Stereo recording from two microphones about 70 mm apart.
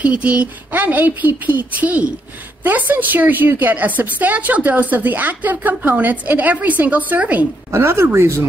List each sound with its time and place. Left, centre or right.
0.0 s a woman's voice: centre
7.7 s speech: right